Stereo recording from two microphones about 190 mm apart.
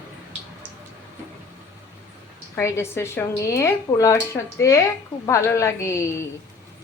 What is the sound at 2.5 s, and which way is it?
Speech, 15° left (ahead or behind).